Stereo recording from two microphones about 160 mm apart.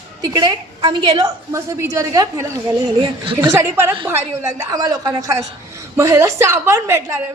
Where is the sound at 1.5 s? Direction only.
20° right (ahead or behind).